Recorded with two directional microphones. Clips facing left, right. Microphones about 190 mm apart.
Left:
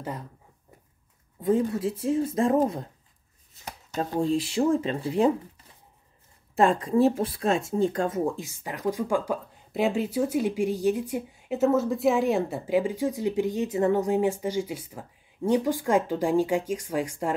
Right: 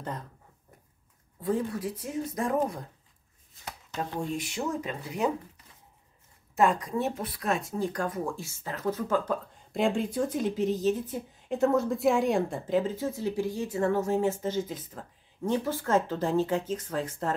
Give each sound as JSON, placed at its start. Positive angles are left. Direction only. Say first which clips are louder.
{"t": 1.4, "sound": "speech", "louder": "left 5 dB", "side_deg": 25}
{"t": 4.1, "sound": "speech", "louder": "left 11 dB", "side_deg": 30}
{"t": 6.5, "sound": "speech", "louder": "left 4 dB", "side_deg": 30}